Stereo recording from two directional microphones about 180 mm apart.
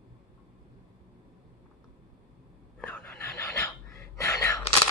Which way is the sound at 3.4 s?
15° left (ahead or behind).